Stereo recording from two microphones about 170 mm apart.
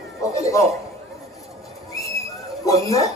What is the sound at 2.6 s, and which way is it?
Speech, 20° left (ahead or behind).